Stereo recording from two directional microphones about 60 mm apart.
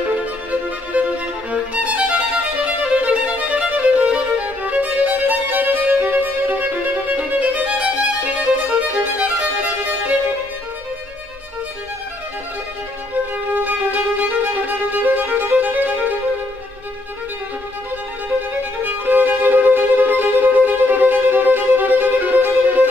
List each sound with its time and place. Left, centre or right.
0.1 s music: right
13.6 s music: right
18.9 s music: right